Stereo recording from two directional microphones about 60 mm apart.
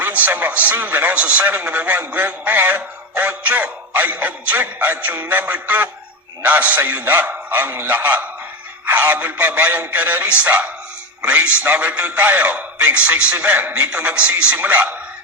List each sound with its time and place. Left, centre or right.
0.0 s music: right